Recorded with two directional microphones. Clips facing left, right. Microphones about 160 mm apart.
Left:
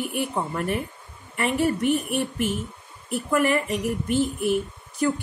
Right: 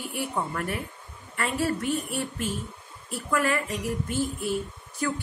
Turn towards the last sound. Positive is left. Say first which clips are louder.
# left 5 dB
turn(degrees=20)  # may be behind; listen again after turning